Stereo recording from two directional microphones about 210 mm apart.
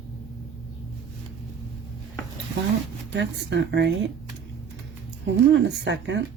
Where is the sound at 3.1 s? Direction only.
55° right (ahead or behind).